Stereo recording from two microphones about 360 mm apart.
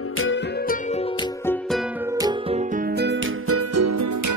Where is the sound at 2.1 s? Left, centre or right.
Centre.